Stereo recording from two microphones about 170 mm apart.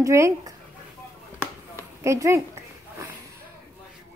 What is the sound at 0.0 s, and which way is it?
Speech, 15° right (ahead or behind).